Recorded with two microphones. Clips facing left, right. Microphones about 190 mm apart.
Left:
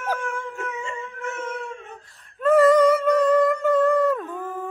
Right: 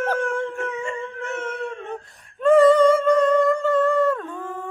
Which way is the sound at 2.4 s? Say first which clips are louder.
Right 2 dB; 5° left (ahead or behind).